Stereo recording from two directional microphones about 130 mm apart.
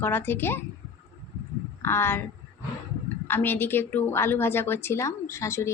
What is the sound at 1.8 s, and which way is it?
Speech, 20° left (ahead or behind).